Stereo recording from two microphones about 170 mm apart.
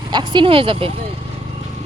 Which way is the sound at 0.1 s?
25° right (ahead or behind).